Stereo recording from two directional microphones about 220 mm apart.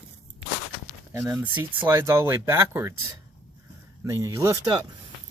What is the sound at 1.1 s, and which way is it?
Speech, 10° right (ahead or behind).